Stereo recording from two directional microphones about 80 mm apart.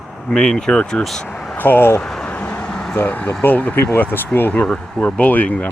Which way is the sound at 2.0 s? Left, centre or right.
Centre.